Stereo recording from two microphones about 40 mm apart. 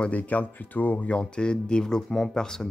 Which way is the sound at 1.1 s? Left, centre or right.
Left.